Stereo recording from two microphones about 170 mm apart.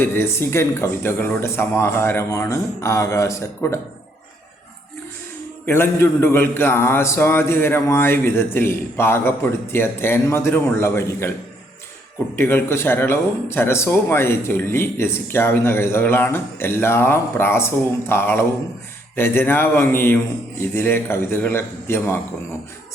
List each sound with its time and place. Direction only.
0.0 s speech: 15° left (ahead or behind)
5.6 s speech: 15° left (ahead or behind)
12.4 s speech: 15° left (ahead or behind)